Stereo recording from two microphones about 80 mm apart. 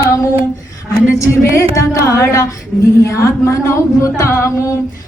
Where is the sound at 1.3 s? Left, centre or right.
Left.